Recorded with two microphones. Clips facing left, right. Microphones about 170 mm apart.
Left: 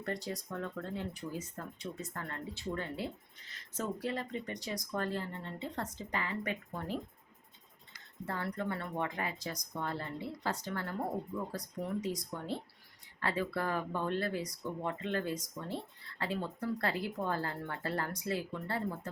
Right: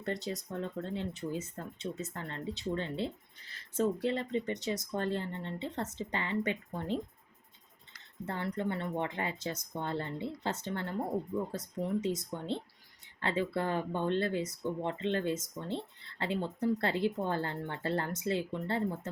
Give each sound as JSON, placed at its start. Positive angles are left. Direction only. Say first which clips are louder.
{"t": 0.0, "sound": "speech", "louder": "right 2 dB", "side_deg": -20}
{"t": 8.5, "sound": "speech", "louder": "right 3 dB", "side_deg": -25}